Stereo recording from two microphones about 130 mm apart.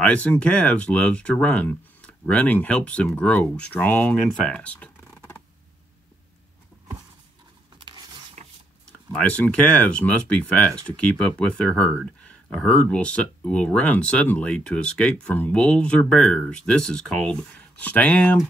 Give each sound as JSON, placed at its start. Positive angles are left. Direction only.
{"t": 0.0, "sound": "speech", "side_deg": 10}
{"t": 7.8, "sound": "a sound", "side_deg": -35}
{"t": 9.2, "sound": "speech", "side_deg": 10}